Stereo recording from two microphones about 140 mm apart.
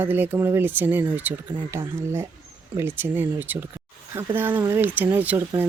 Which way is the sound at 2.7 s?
15° right (ahead or behind).